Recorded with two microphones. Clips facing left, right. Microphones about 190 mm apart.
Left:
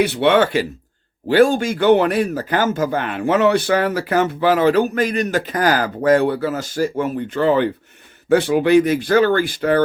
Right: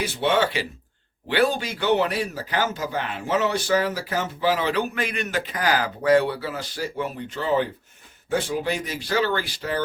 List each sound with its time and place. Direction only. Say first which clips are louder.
0.0 s speech: left 8 dB; 65° left (ahead or behind)
1.3 s speech: left 8 dB; 45° left (ahead or behind)